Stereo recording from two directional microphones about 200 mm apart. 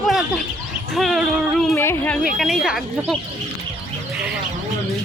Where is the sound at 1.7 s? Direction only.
10° left (ahead or behind).